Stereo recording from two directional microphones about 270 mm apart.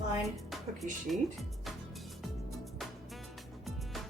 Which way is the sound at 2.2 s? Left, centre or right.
Centre.